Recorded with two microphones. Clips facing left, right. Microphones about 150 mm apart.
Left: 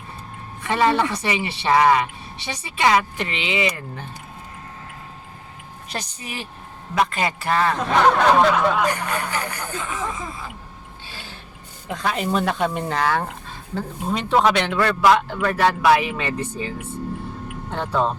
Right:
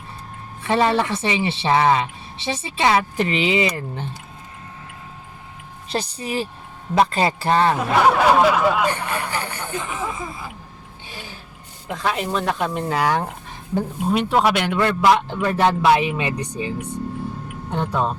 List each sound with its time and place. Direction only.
0.6 s speech: 30° right (ahead or behind)
5.9 s speech: 35° right (ahead or behind)
7.8 s speech: 10° right (ahead or behind)
8.9 s speech: 30° right (ahead or behind)
9.8 s speech: 10° right (ahead or behind)
11.9 s speech: centre (ahead or behind)
13.0 s speech: 15° right (ahead or behind)